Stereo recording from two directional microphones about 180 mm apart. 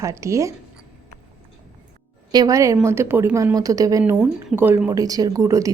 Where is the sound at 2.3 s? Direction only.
20° right (ahead or behind).